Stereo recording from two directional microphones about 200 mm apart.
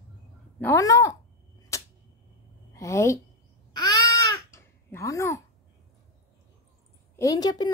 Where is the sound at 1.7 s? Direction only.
15° left (ahead or behind).